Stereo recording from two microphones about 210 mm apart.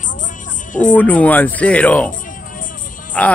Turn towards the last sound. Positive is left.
turn(degrees=5)  # may be behind; listen again after turning